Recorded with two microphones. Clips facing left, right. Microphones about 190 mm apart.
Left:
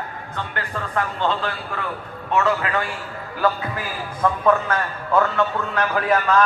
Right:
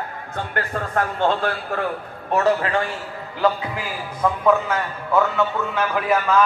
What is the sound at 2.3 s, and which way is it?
Speech, 35° right (ahead or behind).